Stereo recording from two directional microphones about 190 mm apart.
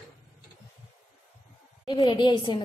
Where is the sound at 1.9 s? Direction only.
25° left (ahead or behind).